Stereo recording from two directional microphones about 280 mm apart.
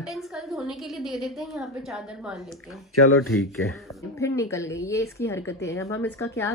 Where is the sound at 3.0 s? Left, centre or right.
Left.